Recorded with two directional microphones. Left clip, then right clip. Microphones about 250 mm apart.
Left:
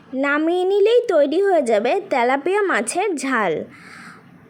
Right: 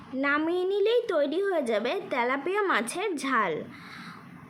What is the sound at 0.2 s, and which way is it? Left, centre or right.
A woman's voice, left.